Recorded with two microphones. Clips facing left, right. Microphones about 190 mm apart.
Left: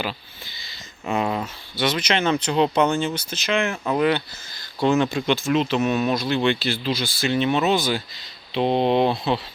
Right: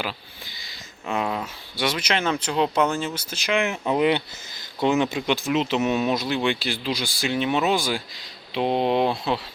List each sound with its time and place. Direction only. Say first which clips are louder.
1.0 s speech: left 3 dB; centre (ahead or behind)
1.7 s speech: left 2 dB; 10° right (ahead or behind)